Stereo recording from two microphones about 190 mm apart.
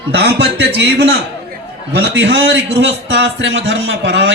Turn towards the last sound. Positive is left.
turn(degrees=-70)  # may be behind; listen again after turning